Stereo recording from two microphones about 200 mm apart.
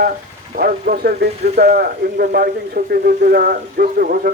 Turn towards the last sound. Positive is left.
turn(degrees=-45)  # may be behind; listen again after turning